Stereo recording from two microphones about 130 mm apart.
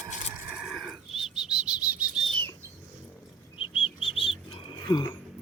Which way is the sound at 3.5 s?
45° left (ahead or behind).